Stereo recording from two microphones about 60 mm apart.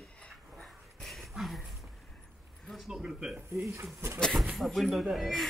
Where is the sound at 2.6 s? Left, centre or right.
Centre.